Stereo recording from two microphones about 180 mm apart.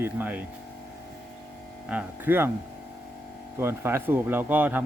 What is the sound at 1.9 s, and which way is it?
Speech, 10° right (ahead or behind).